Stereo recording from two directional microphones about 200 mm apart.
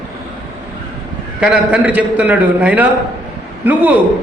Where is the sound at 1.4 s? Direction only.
5° right (ahead or behind).